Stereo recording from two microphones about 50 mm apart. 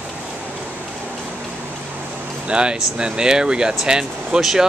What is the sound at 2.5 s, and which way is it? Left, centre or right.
Speech, right.